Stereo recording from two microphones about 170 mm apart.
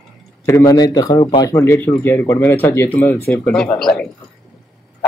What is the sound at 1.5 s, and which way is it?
A man's voice, 15° left (ahead or behind).